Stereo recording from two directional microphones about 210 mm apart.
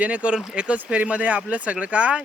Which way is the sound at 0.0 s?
5° right (ahead or behind).